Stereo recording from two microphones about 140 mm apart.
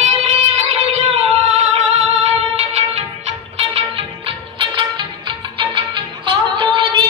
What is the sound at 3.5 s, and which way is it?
Music, 45° right (ahead or behind).